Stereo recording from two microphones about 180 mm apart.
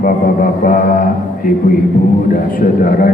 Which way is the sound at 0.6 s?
50° left (ahead or behind).